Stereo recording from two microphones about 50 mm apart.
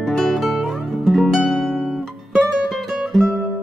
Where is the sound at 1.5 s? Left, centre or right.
Centre.